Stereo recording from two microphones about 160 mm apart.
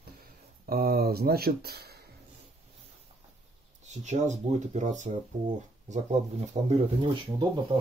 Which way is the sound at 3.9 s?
45° right (ahead or behind).